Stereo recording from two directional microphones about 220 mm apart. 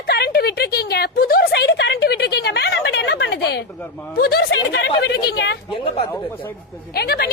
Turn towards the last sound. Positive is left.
turn(degrees=45)  # may be behind; listen again after turning